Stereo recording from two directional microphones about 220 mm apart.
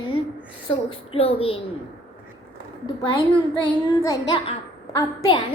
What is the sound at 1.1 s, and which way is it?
Speech, 25° left (ahead or behind).